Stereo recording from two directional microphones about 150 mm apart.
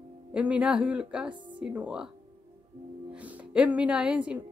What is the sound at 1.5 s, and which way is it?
Speech, 10° right (ahead or behind).